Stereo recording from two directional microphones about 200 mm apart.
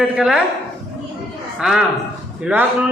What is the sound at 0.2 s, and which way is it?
Speech, 5° right (ahead or behind).